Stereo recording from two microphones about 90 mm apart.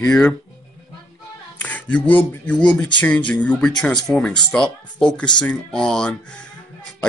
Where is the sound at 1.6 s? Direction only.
15° left (ahead or behind).